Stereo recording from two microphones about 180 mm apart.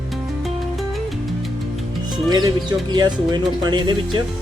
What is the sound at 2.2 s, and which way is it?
Speech, 25° right (ahead or behind).